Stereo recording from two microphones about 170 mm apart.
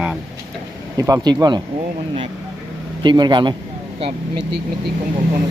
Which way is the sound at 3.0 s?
25° right (ahead or behind).